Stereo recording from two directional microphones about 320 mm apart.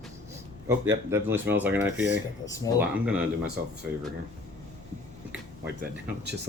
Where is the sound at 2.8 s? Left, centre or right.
Centre.